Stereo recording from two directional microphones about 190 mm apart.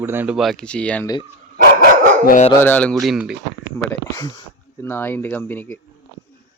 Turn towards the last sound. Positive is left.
turn(degrees=10)  # may be behind; listen again after turning